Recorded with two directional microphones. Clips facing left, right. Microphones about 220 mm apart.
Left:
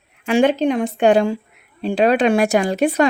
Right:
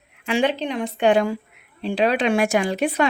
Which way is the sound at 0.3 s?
45° left (ahead or behind).